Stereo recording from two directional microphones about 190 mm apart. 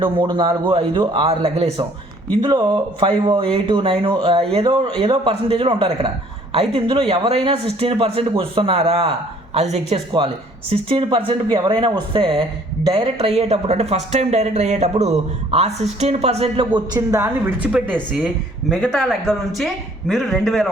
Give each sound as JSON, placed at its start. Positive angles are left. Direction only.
{"t": 0.0, "sound": "speech", "side_deg": -25}
{"t": 16.7, "sound": "speech", "side_deg": -20}